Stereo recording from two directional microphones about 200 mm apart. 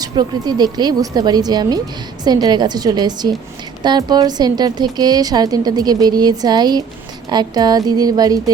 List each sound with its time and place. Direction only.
0.0 s a woman's voice: 20° right (ahead or behind)